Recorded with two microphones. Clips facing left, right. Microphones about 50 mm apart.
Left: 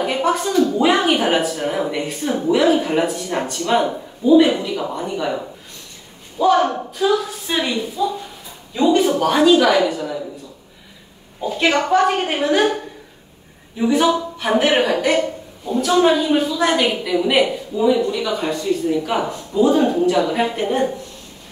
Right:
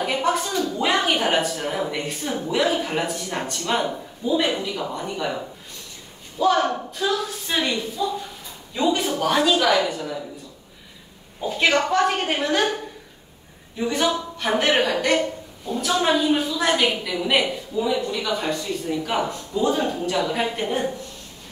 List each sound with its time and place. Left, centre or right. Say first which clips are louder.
0.0 s a sound: left 4 dB; centre
0.7 s a woman's voice: left 5 dB; centre
11.4 s speech: left 3 dB; centre
11.7 s a woman's voice: left 6 dB; centre